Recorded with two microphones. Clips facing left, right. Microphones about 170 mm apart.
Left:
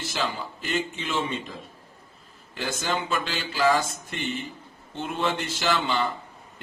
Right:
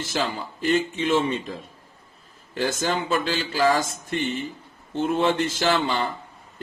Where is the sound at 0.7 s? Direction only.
45° right (ahead or behind).